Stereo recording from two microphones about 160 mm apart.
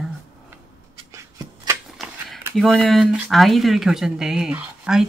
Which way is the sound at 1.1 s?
20° right (ahead or behind).